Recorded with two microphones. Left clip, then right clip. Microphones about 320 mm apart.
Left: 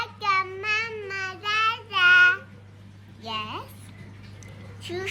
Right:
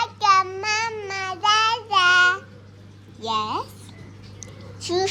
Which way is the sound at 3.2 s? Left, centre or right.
Centre.